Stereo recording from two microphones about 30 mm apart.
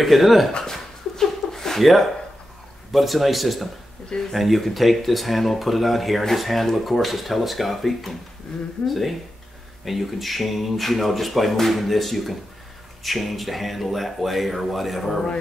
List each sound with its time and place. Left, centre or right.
0.0 s speech: centre
0.5 s a sound: left
1.8 s speech: centre